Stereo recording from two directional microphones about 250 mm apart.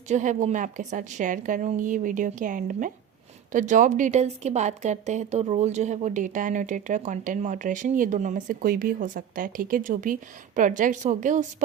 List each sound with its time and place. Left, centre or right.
0.1 s speech: right